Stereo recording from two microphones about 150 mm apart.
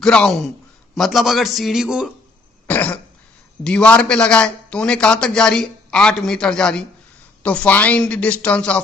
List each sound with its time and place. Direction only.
0.0 s a man's voice: 5° left (ahead or behind)
2.6 s cough: 10° left (ahead or behind)
3.6 s a man's voice: 5° left (ahead or behind)